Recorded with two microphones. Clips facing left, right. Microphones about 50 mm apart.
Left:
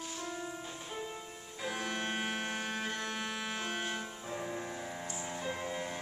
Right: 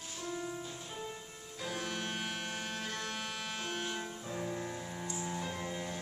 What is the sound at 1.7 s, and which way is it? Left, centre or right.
Music, centre.